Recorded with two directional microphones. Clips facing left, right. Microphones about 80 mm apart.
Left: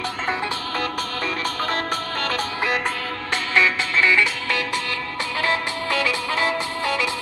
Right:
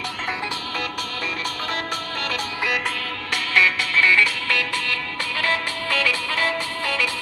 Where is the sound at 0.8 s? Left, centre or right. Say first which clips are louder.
Left 4 dB; left.